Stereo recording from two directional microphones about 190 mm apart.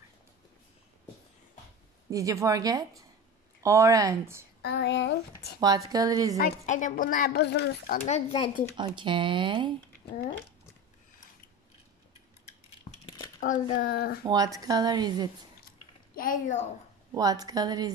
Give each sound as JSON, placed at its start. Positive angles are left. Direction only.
{"t": 2.0, "sound": "speech", "side_deg": -15}
{"t": 4.6, "sound": "speech", "side_deg": 60}
{"t": 5.6, "sound": "speech", "side_deg": -20}
{"t": 6.4, "sound": "speech", "side_deg": 40}
{"t": 8.7, "sound": "speech", "side_deg": -25}
{"t": 13.0, "sound": "a sound", "side_deg": 20}
{"t": 13.4, "sound": "a child's voice", "side_deg": 45}
{"t": 14.2, "sound": "speech", "side_deg": -20}
{"t": 16.2, "sound": "a woman's voice", "side_deg": 45}
{"t": 17.1, "sound": "speech", "side_deg": -20}